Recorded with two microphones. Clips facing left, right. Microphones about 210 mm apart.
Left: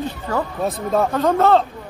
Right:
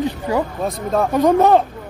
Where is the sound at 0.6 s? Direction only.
Centre (ahead or behind).